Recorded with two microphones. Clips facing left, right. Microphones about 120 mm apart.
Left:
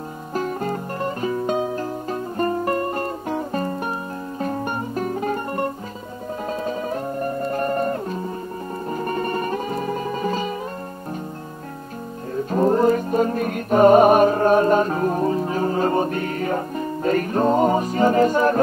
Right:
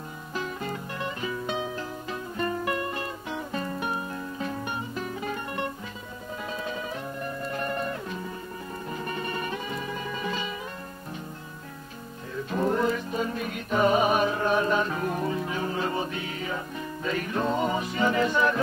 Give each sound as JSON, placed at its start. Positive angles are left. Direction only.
{"t": 0.3, "sound": "music", "side_deg": 45}
{"t": 12.4, "sound": "music", "side_deg": 40}